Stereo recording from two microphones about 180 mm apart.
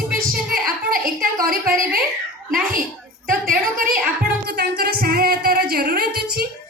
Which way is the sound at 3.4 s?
50° right (ahead or behind).